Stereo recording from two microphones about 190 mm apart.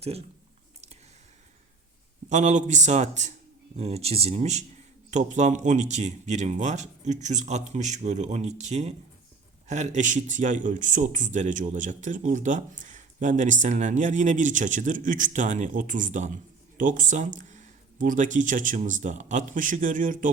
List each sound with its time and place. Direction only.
2.3 s speech: 40° right (ahead or behind)